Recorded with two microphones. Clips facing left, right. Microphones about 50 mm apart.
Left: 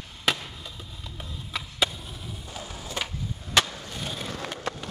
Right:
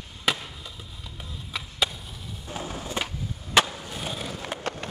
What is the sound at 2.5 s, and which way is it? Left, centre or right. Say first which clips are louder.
Skateboard: right 7 dB; right.